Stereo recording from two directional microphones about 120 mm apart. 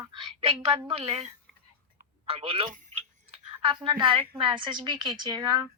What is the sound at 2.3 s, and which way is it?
A woman's voice, 50° right (ahead or behind).